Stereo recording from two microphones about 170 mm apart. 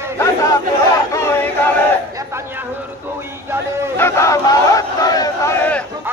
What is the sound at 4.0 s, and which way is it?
Crowd, 15° left (ahead or behind).